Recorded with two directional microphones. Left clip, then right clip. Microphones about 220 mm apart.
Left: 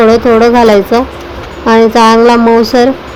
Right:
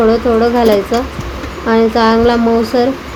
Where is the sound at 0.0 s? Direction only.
25° left (ahead or behind).